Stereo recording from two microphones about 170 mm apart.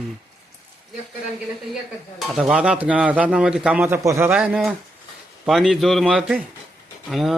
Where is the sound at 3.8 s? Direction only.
15° right (ahead or behind).